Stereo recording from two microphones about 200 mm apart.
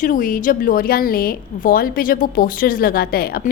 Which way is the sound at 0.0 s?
45° left (ahead or behind).